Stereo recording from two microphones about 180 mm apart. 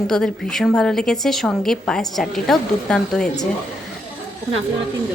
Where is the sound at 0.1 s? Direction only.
5° left (ahead or behind).